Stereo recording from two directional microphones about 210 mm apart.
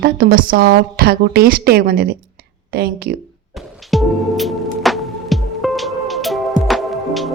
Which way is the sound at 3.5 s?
Centre (ahead or behind).